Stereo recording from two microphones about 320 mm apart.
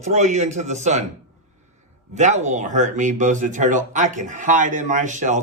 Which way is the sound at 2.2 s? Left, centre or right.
Right.